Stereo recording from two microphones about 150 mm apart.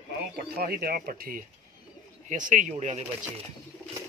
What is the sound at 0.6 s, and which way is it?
Speech, 90° right.